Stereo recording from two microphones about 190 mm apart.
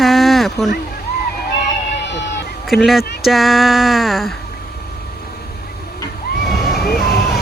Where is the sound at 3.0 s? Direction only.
55° left (ahead or behind).